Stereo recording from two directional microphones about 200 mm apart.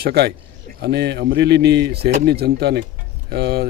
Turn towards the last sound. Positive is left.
turn(degrees=-55)  # may be behind; listen again after turning